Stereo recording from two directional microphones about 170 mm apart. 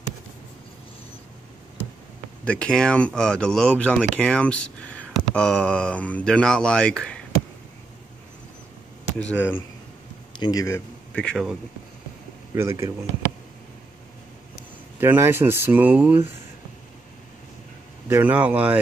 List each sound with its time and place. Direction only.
2.4 s speech: 10° left (ahead or behind)
9.2 s speech: 10° left (ahead or behind)
10.4 s speech: 20° left (ahead or behind)
11.1 s speech: 5° left (ahead or behind)
12.5 s speech: 15° right (ahead or behind)
15.0 s speech: 15° right (ahead or behind)
18.0 s speech: 10° right (ahead or behind)